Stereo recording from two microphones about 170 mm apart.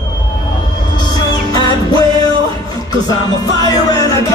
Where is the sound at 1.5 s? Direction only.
25° left (ahead or behind).